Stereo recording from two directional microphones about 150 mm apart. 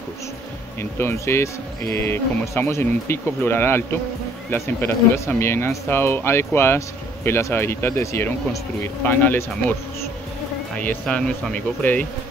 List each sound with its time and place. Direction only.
0.7 s speech: 15° left (ahead or behind)
10.8 s speech: 10° left (ahead or behind)